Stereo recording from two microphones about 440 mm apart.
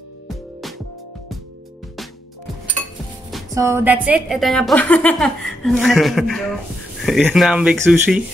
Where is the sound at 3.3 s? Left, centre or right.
Centre.